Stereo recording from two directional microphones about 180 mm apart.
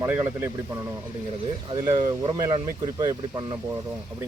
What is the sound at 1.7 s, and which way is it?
Speech, 20° right (ahead or behind).